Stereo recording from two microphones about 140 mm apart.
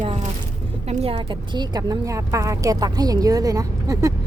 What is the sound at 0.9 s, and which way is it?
A woman's voice, 40° right (ahead or behind).